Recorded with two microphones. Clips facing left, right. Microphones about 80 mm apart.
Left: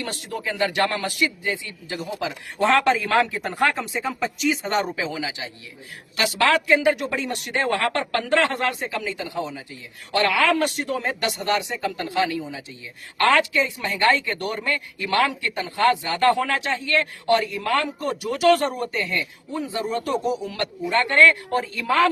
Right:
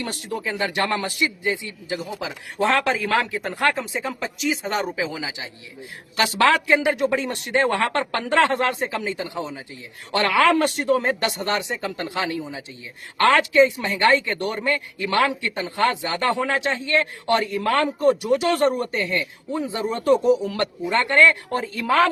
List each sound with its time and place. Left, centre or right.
0.0 s speech: right
1.9 s a man's voice: centre
5.1 s a man's voice: centre
6.1 s speech: right